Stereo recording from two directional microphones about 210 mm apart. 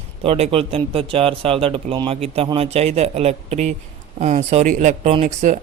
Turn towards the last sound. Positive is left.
turn(degrees=-35)  # may be behind; listen again after turning